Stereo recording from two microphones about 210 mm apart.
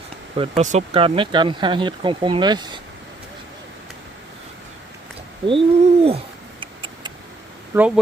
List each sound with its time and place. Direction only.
0.3 s speech: 30° right (ahead or behind)
5.5 s bird: 25° right (ahead or behind)
7.7 s speech: 5° right (ahead or behind)